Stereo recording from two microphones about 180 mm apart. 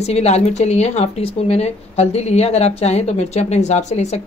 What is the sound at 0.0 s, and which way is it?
A woman's voice, 35° left (ahead or behind).